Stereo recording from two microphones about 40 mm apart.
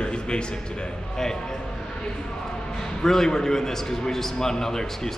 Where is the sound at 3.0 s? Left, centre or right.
Centre.